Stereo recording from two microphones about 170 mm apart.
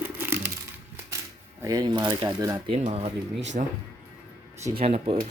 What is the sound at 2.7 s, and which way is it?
Speech, 35° right (ahead or behind).